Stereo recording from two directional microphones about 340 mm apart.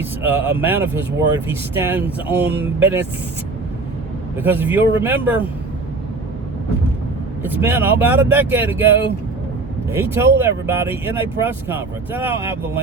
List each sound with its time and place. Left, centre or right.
0.0 s speech: centre
4.4 s speech: centre
7.4 s speech: centre